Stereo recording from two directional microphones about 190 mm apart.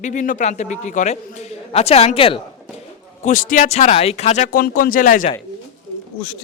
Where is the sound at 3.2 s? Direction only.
45° left (ahead or behind).